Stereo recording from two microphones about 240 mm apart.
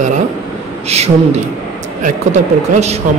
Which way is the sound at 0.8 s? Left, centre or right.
Right.